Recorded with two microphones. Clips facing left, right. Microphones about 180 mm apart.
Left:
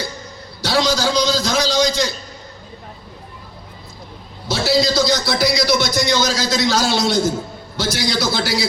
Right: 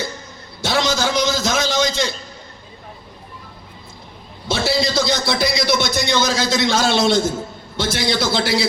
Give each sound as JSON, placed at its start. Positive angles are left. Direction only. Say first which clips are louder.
{"t": 0.6, "sound": "a man's voice", "louder": "left 1 dB", "side_deg": -25}
{"t": 4.4, "sound": "a man's voice", "louder": "left 2 dB", "side_deg": -25}